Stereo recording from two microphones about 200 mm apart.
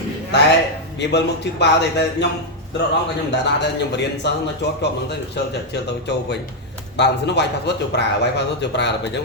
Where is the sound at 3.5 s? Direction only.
60° left (ahead or behind).